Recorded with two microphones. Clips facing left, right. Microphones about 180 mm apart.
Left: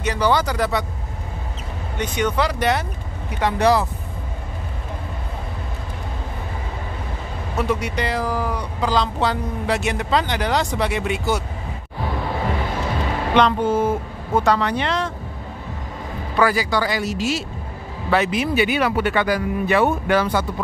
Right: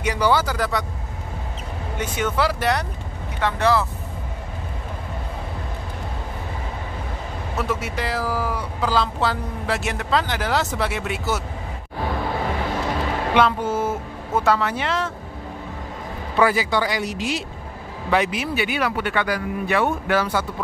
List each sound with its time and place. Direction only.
0.0 s speech: 10° right (ahead or behind)
2.0 s speech: 5° right (ahead or behind)
3.3 s speech: 15° left (ahead or behind)
7.5 s speech: centre (ahead or behind)
13.3 s speech: 10° right (ahead or behind)
16.3 s speech: 20° right (ahead or behind); by 20.2 s centre (ahead or behind)